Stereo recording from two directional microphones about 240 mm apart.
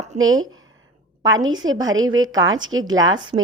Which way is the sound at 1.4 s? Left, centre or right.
Right.